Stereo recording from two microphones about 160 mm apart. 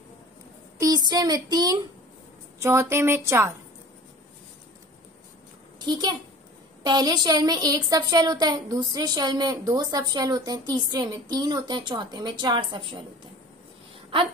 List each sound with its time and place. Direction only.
0.7 s a woman's voice: 20° right (ahead or behind)
5.8 s a child's voice: 25° right (ahead or behind)